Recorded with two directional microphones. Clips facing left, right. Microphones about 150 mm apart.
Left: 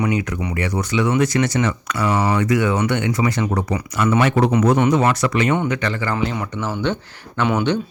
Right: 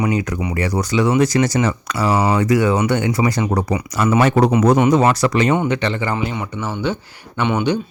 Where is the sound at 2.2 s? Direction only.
20° right (ahead or behind).